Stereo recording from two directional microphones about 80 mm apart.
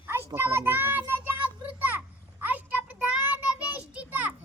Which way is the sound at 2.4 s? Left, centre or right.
Right.